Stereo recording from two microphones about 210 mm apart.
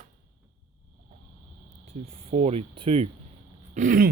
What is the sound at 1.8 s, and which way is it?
Speech, 30° right (ahead or behind).